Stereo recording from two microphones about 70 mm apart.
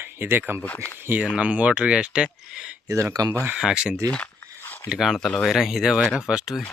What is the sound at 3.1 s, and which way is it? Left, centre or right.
Speech, right.